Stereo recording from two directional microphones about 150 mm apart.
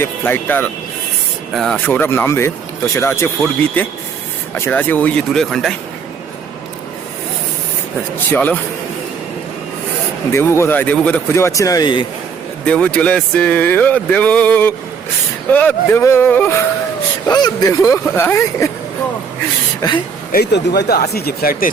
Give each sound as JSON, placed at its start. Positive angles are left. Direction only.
{"t": 0.0, "sound": "speech", "side_deg": 15}
{"t": 4.5, "sound": "speech", "side_deg": 15}
{"t": 8.3, "sound": "speech", "side_deg": 10}
{"t": 10.3, "sound": "speech", "side_deg": 15}
{"t": 12.6, "sound": "speech", "side_deg": 5}
{"t": 17.2, "sound": "speech", "side_deg": 25}
{"t": 20.3, "sound": "speech", "side_deg": 90}